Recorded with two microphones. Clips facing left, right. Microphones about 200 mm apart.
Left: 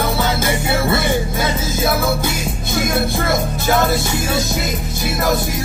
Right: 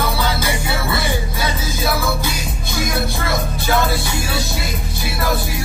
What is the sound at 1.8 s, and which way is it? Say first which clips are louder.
Music: left 3 dB; 25° left (ahead or behind).